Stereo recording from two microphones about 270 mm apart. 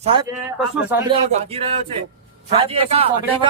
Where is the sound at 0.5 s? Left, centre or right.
Centre.